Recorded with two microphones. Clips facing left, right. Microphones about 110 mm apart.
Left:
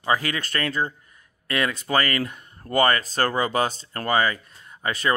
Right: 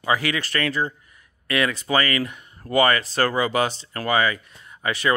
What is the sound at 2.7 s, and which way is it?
Speech, 40° left (ahead or behind).